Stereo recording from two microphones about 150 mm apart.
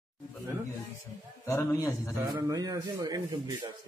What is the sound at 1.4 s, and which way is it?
Speech, 20° left (ahead or behind).